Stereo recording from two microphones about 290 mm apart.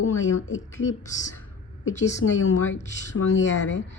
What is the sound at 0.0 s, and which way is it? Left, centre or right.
Speech, left.